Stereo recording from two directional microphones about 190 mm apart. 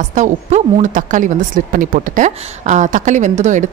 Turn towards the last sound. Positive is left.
turn(degrees=-40)  # may be behind; listen again after turning